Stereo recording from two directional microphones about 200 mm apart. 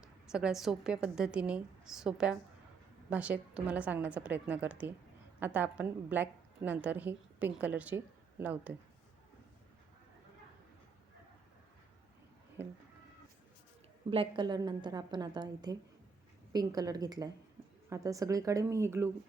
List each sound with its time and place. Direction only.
0.0 s a woman's voice: 5° right (ahead or behind)
14.1 s a woman's voice: 25° right (ahead or behind)